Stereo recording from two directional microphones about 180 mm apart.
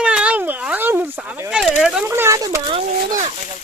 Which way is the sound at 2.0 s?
15° right (ahead or behind).